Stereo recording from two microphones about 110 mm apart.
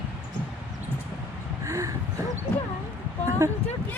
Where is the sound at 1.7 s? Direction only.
30° right (ahead or behind).